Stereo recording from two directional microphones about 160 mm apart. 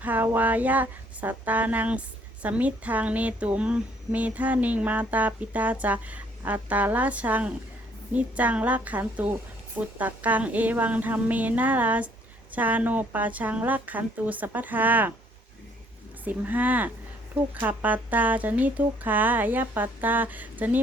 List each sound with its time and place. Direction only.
0.0 s speech: 10° right (ahead or behind)
16.2 s speech: 10° right (ahead or behind)